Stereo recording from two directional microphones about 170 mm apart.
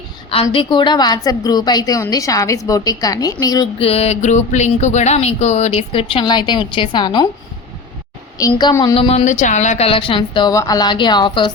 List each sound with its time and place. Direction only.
0.5 s a woman's voice: 30° left (ahead or behind)
3.8 s speech: 35° left (ahead or behind)
8.4 s a woman's voice: 20° left (ahead or behind)
9.0 s speech: 35° left (ahead or behind)